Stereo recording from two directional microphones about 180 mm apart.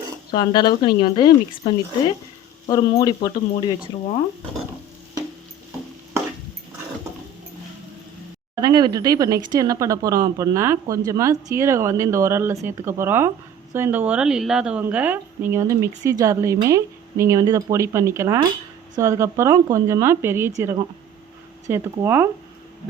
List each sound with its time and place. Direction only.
0.3 s speech: 25° left (ahead or behind)
8.6 s a woman's voice: 20° right (ahead or behind)
21.7 s a woman's voice: 10° right (ahead or behind)